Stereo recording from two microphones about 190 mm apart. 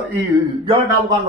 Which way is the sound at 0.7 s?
25° right (ahead or behind).